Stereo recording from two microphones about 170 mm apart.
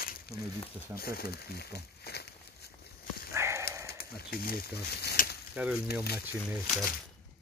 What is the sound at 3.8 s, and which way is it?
Speech, 65° left (ahead or behind).